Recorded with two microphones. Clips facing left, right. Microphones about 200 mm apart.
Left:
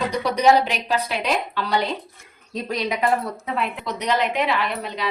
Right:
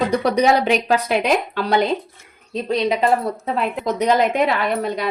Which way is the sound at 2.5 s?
25° right (ahead or behind).